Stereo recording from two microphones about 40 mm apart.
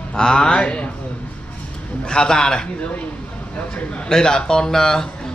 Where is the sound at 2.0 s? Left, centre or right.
Centre.